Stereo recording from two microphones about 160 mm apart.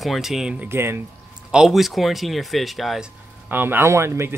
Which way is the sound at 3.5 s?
10° right (ahead or behind).